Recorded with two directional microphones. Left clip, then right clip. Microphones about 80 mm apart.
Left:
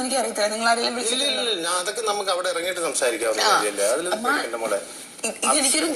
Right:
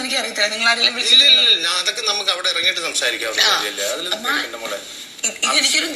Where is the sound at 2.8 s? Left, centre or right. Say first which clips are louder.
Right 2 dB; left.